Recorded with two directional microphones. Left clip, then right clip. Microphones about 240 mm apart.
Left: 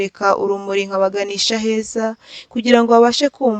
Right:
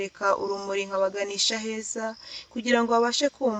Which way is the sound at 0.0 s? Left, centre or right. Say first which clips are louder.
Left 9 dB; left.